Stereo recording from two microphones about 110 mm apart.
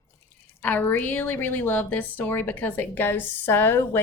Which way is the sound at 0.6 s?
15° left (ahead or behind).